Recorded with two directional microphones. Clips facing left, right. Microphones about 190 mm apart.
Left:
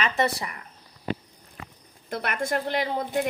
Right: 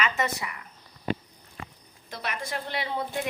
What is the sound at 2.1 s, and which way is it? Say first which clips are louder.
Speech: left 6 dB; 55° left (ahead or behind).